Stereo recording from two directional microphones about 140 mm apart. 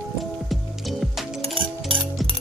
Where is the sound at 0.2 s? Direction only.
Centre (ahead or behind).